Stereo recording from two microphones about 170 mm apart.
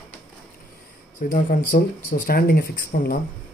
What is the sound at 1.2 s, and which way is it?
Speech, 50° left (ahead or behind).